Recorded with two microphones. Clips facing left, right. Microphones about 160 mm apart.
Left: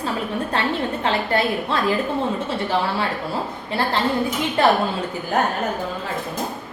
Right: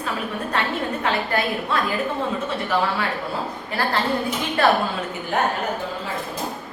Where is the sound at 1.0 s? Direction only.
30° left (ahead or behind).